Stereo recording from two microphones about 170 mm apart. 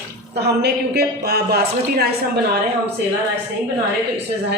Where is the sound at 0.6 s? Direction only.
70° right (ahead or behind).